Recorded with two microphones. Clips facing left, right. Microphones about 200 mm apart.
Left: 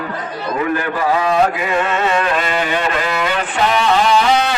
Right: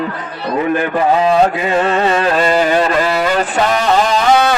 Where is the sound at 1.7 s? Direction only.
35° right (ahead or behind).